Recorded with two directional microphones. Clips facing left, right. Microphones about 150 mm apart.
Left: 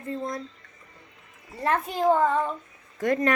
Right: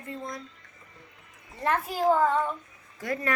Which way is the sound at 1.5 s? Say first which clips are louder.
Left 2 dB; centre (ahead or behind).